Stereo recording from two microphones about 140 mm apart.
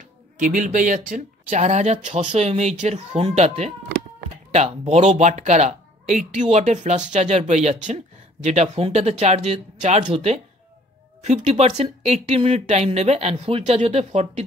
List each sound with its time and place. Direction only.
0.4 s speech: 70° right (ahead or behind); by 14.4 s 50° right (ahead or behind)